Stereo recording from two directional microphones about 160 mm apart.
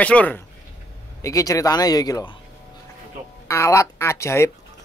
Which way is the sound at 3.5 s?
20° left (ahead or behind).